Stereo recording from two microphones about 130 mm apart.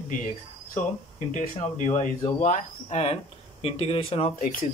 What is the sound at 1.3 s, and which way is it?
Speech, 75° left (ahead or behind).